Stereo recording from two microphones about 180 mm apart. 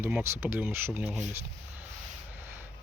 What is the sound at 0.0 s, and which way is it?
Speech, 10° right (ahead or behind).